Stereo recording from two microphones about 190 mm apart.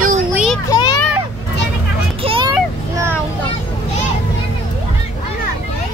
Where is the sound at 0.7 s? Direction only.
20° left (ahead or behind).